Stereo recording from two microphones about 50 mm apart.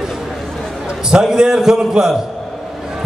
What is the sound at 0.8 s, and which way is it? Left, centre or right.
A man's voice, centre.